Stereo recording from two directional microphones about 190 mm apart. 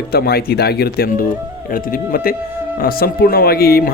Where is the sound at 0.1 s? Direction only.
55° left (ahead or behind).